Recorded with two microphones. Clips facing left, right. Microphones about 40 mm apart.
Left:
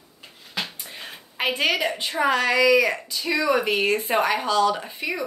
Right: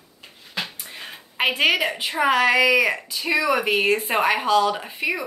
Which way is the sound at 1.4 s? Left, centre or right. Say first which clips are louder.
Right 3 dB; right.